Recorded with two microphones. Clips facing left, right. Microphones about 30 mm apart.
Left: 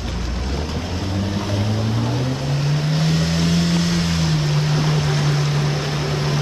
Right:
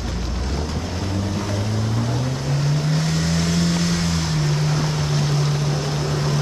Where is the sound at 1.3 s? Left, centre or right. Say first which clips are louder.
Left 2 dB; centre.